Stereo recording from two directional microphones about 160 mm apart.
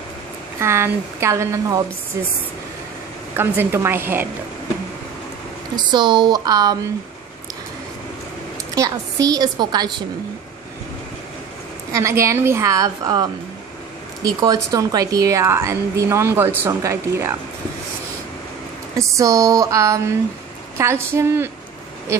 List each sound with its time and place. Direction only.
0.6 s a woman's voice: 15° right (ahead or behind)
3.3 s a woman's voice: 15° right (ahead or behind)
5.9 s a woman's voice: 30° right (ahead or behind)
8.7 s a woman's voice: 20° right (ahead or behind)
11.9 s a woman's voice: 20° right (ahead or behind)
18.9 s a woman's voice: 20° right (ahead or behind)